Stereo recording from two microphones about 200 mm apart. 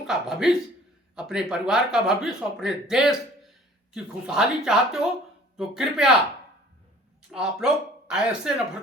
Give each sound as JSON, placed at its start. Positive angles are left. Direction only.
{"t": 0.0, "sound": "speech", "side_deg": 0}
{"t": 7.3, "sound": "speech", "side_deg": 0}